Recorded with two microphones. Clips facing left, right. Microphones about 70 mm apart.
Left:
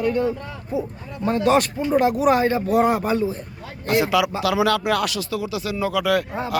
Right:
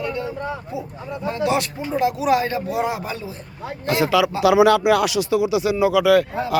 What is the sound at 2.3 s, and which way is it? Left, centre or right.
Speech, left.